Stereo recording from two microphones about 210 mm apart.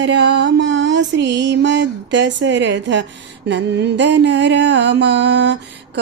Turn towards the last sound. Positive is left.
turn(degrees=-55)  # may be behind; listen again after turning